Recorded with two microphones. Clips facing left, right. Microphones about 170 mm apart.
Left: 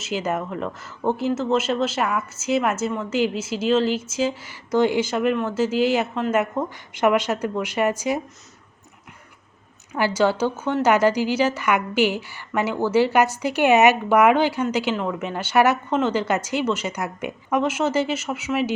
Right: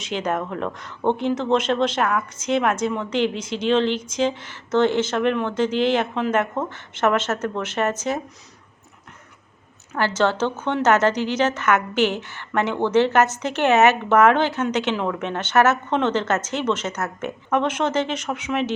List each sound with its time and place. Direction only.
0.0 s speech: 5° left (ahead or behind)
9.9 s speech: 10° left (ahead or behind)